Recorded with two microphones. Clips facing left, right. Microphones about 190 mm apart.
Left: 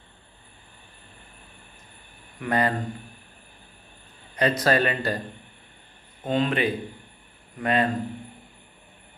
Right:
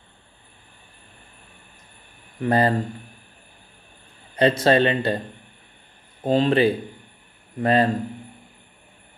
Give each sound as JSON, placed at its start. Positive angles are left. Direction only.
{"t": 2.4, "sound": "speech", "side_deg": -30}
{"t": 4.4, "sound": "speech", "side_deg": -25}
{"t": 6.2, "sound": "speech", "side_deg": -30}